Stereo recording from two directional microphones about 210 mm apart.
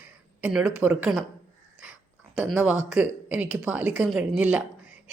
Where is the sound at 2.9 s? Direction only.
5° right (ahead or behind).